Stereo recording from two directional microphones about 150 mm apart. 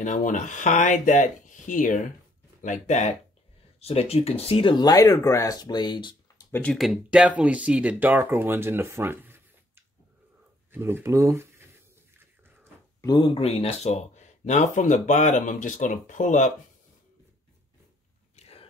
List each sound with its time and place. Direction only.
0.0 s speech: 55° left (ahead or behind); by 6.1 s 30° left (ahead or behind)
6.5 s speech: 5° left (ahead or behind); by 11.6 s 15° right (ahead or behind)
13.0 s speech: 30° left (ahead or behind); by 16.5 s 55° left (ahead or behind)
18.3 s a sound: 45° left (ahead or behind)